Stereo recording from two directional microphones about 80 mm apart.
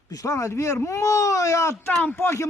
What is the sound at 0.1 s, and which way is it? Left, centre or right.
Speech, left.